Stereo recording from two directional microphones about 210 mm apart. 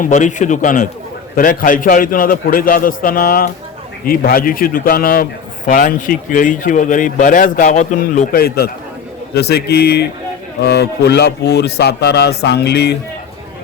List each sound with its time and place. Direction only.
0.0 s a man's voice: 35° left (ahead or behind)